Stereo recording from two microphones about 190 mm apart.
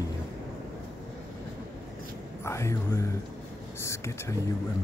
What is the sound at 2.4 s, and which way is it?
Speech, 15° left (ahead or behind).